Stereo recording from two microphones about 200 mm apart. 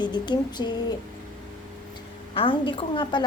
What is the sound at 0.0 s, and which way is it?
Speech, 20° left (ahead or behind).